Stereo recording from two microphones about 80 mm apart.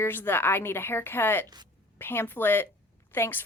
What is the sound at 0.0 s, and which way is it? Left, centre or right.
A woman's voice, left.